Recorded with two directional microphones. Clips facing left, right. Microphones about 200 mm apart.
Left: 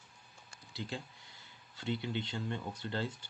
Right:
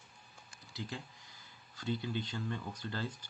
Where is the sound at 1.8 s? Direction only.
25° left (ahead or behind).